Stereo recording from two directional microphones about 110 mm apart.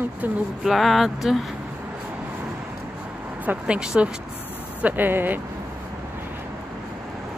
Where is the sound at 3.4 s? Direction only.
10° right (ahead or behind).